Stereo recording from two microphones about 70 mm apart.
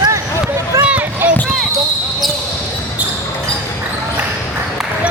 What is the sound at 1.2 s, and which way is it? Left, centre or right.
Basketball bounce, right.